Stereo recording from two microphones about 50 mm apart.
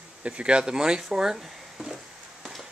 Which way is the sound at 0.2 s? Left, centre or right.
Right.